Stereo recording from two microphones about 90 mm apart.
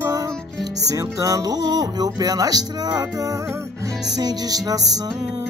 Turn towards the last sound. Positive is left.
turn(degrees=-45)  # may be behind; listen again after turning